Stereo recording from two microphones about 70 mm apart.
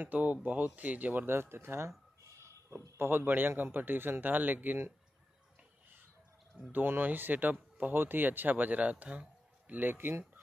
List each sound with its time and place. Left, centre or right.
0.0 s speech: right
3.0 s speech: right
6.7 s speech: right